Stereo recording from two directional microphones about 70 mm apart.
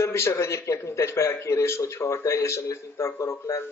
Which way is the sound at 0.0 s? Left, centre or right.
Left.